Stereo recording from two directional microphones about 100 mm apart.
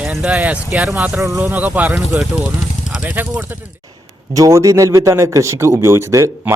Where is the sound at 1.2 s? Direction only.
25° right (ahead or behind).